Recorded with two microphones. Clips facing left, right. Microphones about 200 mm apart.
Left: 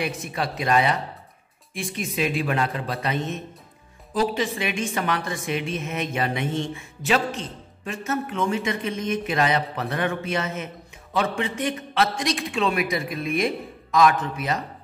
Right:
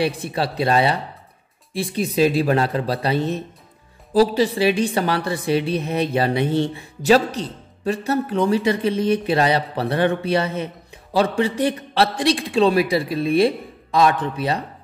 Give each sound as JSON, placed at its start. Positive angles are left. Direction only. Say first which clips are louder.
{"t": 0.0, "sound": "a woman's voice", "louder": "right 6 dB", "side_deg": -30}